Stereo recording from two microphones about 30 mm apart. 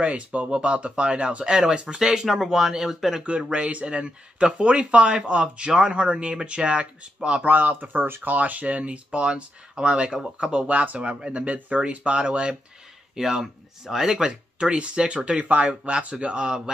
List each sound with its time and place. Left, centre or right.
0.0 s speech: right
2.0 s speech: centre
3.5 s speech: right
7.4 s speech: right
8.4 s speech: right
9.3 s speech: right
11.4 s speech: right
13.1 s speech: centre
14.6 s speech: right
15.4 s speech: right
15.9 s speech: right